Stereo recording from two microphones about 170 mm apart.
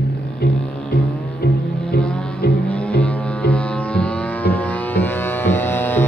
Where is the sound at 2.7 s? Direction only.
10° left (ahead or behind).